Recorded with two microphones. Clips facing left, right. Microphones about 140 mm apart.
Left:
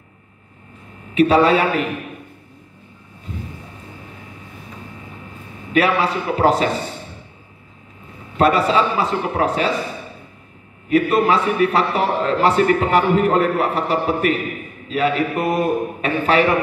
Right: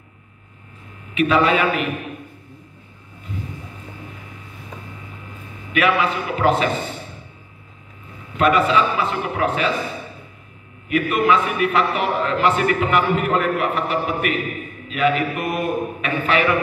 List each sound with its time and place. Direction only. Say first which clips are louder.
1.1 s a man's voice: left 3 dB; 35° left (ahead or behind)
5.7 s a man's voice: left 2 dB; 35° left (ahead or behind)
8.4 s a man's voice: left 1 dB; 35° left (ahead or behind)
10.9 s a man's voice: left 2 dB; 35° left (ahead or behind)